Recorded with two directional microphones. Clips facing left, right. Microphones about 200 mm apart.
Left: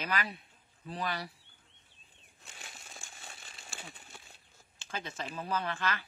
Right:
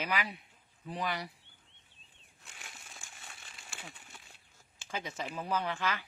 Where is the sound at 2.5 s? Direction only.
30° left (ahead or behind).